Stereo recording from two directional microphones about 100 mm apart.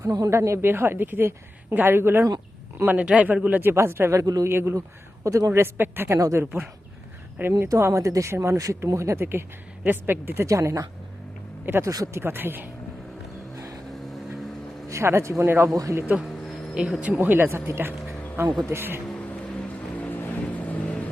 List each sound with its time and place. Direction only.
0.0 s a man's voice: 35° right (ahead or behind)
6.1 s speech: 35° right (ahead or behind)
6.4 s a man's voice: 20° right (ahead or behind)
7.7 s a man's voice: 30° right (ahead or behind)
13.9 s vehicle: centre (ahead or behind)
14.8 s a man's voice: 30° right (ahead or behind)
16.0 s a man's voice: 15° right (ahead or behind)
19.0 s vehicle: 15° left (ahead or behind)